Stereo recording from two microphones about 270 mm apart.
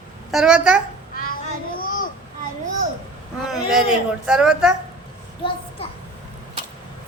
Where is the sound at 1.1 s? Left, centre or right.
Left.